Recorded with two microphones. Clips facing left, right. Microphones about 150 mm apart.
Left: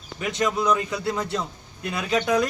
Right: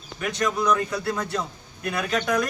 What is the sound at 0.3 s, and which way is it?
Speech, 25° left (ahead or behind).